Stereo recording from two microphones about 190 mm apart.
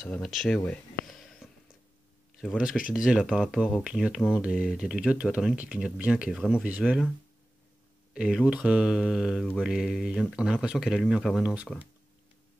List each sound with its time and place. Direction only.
0.0 s speech: 5° left (ahead or behind)
0.6 s a sound: 5° left (ahead or behind)
2.3 s speech: 5° right (ahead or behind)
8.1 s speech: 5° right (ahead or behind)